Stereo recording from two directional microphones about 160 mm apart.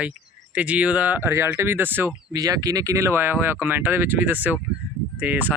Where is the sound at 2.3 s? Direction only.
25° right (ahead or behind).